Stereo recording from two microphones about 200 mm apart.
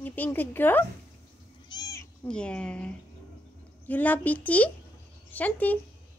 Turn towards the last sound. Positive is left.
turn(degrees=10)  # may be behind; listen again after turning